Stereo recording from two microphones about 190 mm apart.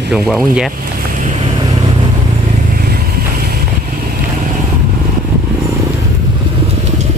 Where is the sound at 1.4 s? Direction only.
20° right (ahead or behind).